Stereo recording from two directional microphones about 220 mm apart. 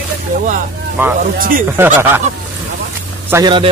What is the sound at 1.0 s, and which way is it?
Speech, 10° right (ahead or behind).